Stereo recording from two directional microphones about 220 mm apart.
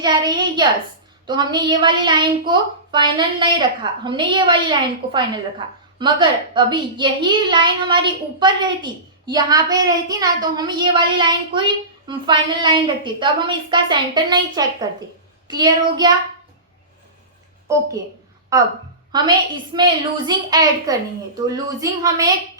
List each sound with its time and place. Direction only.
0.0 s a woman's voice: 20° right (ahead or behind)
18.5 s a woman's voice: 15° right (ahead or behind)